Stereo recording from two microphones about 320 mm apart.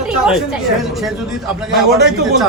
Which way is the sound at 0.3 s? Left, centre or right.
Centre.